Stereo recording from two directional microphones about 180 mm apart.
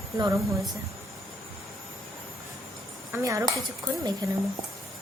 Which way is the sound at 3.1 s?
15° right (ahead or behind).